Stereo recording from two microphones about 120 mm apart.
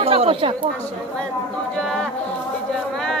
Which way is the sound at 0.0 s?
50° right (ahead or behind).